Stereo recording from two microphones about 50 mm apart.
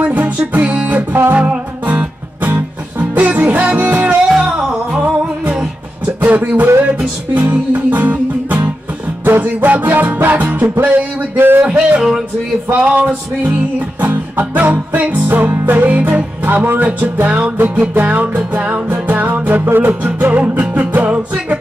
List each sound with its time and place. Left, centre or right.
0.0 s music: right
4.4 s music: centre
6.2 s music: right
11.3 s speech: right
11.6 s music: right